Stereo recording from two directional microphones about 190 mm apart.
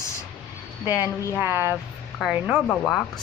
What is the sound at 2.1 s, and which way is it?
Speech, centre (ahead or behind).